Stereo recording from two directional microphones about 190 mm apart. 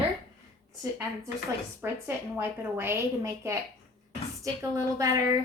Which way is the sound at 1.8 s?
10° right (ahead or behind).